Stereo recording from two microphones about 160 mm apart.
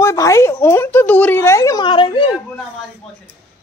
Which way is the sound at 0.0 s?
20° left (ahead or behind).